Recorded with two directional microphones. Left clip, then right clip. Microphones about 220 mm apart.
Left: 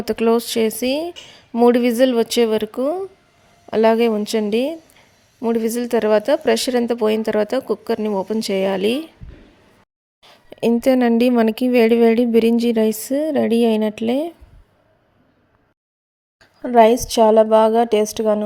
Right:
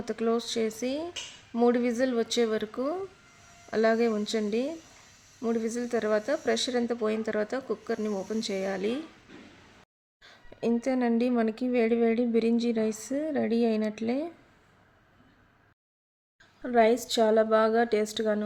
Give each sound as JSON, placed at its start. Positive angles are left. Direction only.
{"t": 0.0, "sound": "speech", "side_deg": 40}
{"t": 10.2, "sound": "speech", "side_deg": 40}
{"t": 16.6, "sound": "a woman's voice", "side_deg": 30}